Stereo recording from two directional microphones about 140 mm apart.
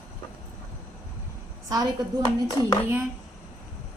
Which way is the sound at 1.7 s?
30° right (ahead or behind).